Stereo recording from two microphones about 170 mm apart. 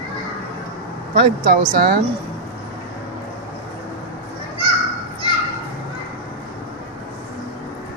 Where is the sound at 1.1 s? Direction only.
55° right (ahead or behind).